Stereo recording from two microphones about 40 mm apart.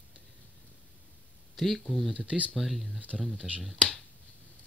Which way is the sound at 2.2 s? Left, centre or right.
Right.